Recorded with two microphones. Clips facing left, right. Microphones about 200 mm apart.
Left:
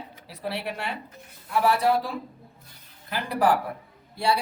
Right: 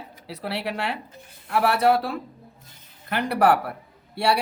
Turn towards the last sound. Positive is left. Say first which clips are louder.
# right 2 dB
turn(degrees=-70)  # may be behind; listen again after turning